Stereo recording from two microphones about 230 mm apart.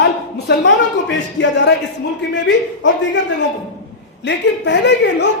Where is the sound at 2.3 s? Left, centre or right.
Left.